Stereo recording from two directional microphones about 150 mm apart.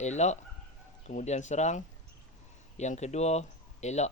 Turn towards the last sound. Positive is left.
turn(degrees=50)  # may be behind; listen again after turning